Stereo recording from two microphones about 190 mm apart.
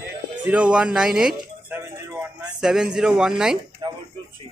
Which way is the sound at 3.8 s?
25° right (ahead or behind).